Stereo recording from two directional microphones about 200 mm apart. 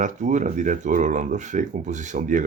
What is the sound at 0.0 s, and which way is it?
Speech, 40° right (ahead or behind).